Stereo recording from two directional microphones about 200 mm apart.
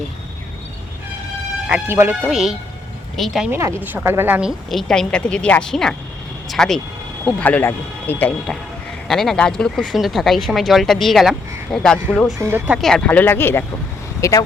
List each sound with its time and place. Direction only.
1.6 s speech: 10° right (ahead or behind)
3.5 s speech: 15° right (ahead or behind)
12.4 s speech: 10° right (ahead or behind); by 14.4 s 15° left (ahead or behind)